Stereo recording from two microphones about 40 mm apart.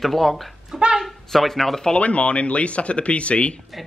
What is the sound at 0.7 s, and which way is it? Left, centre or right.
Speech, centre.